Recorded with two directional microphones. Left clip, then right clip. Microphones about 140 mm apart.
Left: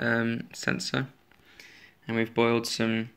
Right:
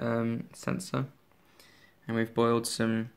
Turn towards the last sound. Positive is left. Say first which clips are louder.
# left 2 dB
turn(degrees=-25)  # may be behind; listen again after turning